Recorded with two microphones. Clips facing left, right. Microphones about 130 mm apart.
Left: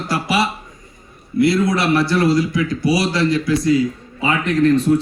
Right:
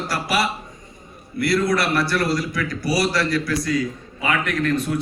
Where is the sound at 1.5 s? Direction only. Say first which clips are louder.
Left 3 dB; 25° left (ahead or behind).